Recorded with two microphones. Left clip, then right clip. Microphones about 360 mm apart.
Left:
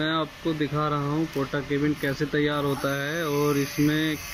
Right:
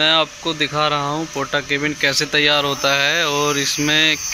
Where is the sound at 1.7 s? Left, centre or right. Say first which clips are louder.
Right 9 dB; right.